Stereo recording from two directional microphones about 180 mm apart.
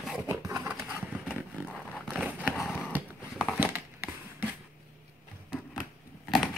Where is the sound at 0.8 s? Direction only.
5° right (ahead or behind).